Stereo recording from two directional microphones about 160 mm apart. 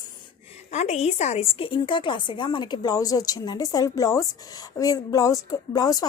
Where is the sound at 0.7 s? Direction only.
45° left (ahead or behind).